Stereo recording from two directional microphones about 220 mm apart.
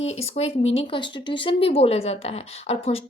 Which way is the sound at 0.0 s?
30° left (ahead or behind).